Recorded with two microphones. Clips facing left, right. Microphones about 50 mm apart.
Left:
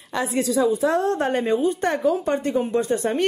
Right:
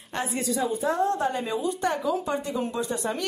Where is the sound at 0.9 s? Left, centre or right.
Left.